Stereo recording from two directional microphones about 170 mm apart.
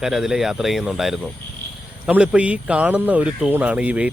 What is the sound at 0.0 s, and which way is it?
A man's voice, 5° right (ahead or behind).